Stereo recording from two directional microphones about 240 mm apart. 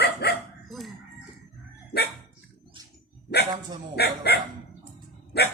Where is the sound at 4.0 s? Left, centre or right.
Left.